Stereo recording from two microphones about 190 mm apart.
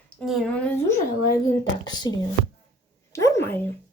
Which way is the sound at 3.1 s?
15° left (ahead or behind).